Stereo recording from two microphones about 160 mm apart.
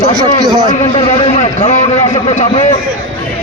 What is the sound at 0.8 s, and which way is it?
A man's voice, 40° left (ahead or behind).